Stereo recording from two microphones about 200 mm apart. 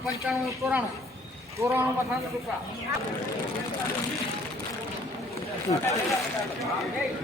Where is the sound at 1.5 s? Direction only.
15° right (ahead or behind).